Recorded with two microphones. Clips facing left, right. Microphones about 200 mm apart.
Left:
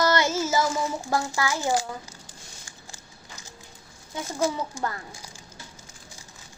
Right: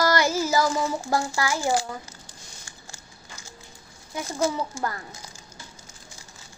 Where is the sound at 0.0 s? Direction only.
20° left (ahead or behind).